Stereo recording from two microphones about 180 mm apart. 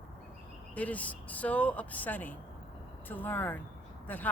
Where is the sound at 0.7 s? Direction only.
10° left (ahead or behind).